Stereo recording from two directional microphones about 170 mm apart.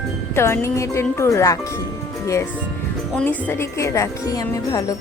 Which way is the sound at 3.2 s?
10° left (ahead or behind).